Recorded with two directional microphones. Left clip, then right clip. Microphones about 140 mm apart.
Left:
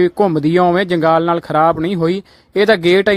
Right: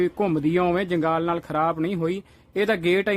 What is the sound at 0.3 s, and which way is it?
Speech, 35° left (ahead or behind).